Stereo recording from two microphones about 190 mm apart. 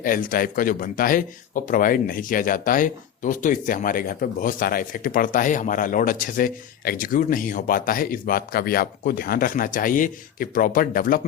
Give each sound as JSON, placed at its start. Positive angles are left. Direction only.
{"t": 0.0, "sound": "speech", "side_deg": 45}